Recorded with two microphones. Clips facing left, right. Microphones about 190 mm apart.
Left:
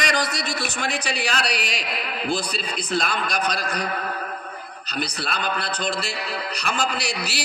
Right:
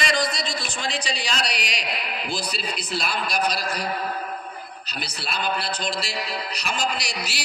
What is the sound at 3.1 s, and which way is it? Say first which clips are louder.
Speech: even; 10° right (ahead or behind).